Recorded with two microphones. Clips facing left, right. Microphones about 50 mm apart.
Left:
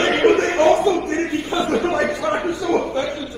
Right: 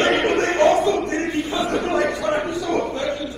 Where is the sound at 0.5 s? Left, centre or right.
Left.